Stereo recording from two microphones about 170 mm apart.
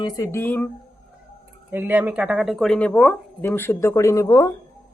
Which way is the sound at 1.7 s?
10° right (ahead or behind).